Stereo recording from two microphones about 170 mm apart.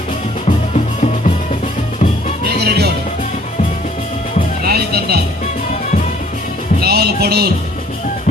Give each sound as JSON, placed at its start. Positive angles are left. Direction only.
{"t": 0.4, "sound": "music", "side_deg": 40}
{"t": 2.6, "sound": "music", "side_deg": -70}
{"t": 4.6, "sound": "music", "side_deg": -70}
{"t": 6.8, "sound": "music", "side_deg": -65}